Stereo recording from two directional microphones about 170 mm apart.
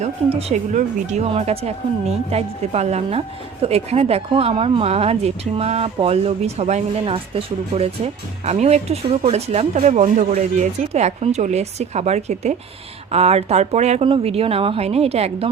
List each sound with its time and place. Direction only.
0.3 s speech: 40° right (ahead or behind)